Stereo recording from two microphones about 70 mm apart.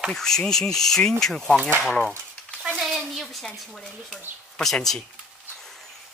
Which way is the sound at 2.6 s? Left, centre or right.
Centre.